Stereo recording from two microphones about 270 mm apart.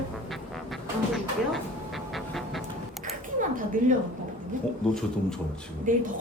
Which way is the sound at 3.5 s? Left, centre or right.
Right.